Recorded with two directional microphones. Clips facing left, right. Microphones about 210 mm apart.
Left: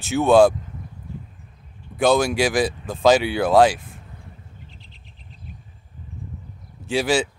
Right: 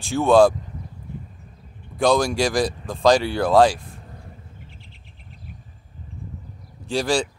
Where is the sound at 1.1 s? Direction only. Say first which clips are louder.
Even; 55° right (ahead or behind).